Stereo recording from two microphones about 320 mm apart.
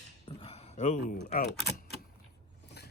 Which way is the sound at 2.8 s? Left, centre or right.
Left.